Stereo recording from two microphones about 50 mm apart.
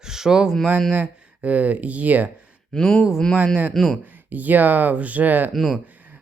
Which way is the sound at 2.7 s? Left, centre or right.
Centre.